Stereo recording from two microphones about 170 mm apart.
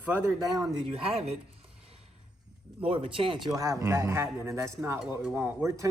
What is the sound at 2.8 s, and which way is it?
Speech, 30° right (ahead or behind).